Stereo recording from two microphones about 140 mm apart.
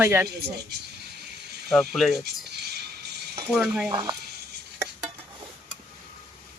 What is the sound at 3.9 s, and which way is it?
Speech, 30° right (ahead or behind).